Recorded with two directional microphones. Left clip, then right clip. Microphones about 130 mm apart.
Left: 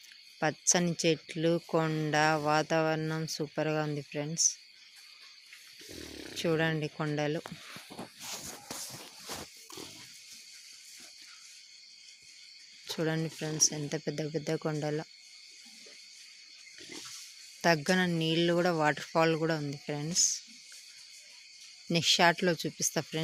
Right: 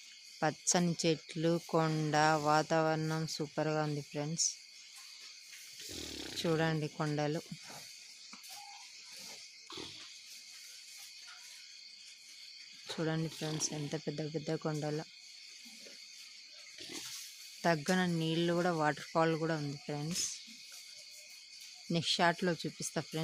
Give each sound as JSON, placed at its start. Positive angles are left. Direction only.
{"t": 0.7, "sound": "speech", "side_deg": -5}
{"t": 5.9, "sound": "wild animals", "side_deg": 15}
{"t": 6.3, "sound": "speech", "side_deg": -5}
{"t": 12.9, "sound": "speech", "side_deg": 5}
{"t": 17.6, "sound": "speech", "side_deg": 10}
{"t": 21.8, "sound": "speech", "side_deg": 10}